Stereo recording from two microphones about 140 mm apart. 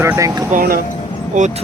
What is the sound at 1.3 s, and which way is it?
Speech, 60° right (ahead or behind).